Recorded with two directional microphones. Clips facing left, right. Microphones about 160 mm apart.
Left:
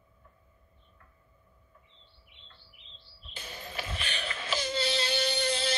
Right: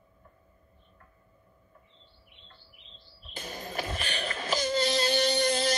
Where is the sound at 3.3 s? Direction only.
40° right (ahead or behind).